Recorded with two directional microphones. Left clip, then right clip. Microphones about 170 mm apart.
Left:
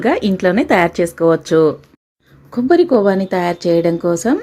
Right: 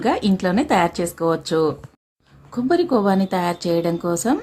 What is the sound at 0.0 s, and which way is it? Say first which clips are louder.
A woman's voice: left 5 dB; 15° left (ahead or behind).